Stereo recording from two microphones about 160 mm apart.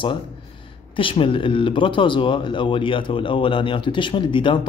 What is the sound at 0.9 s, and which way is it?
Speech, 35° left (ahead or behind).